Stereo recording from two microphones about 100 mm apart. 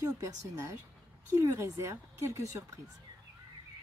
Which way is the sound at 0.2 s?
30° right (ahead or behind).